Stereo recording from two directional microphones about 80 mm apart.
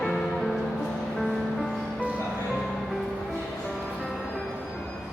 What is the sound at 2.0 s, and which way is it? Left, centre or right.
Music, centre.